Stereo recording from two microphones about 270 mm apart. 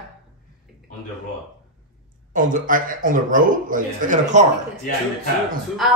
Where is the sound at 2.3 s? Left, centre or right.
Right.